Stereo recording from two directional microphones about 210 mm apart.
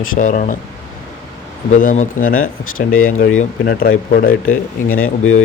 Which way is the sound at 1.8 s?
40° left (ahead or behind).